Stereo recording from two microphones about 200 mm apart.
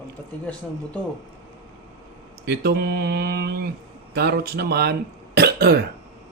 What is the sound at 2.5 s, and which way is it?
Speech, 55° right (ahead or behind).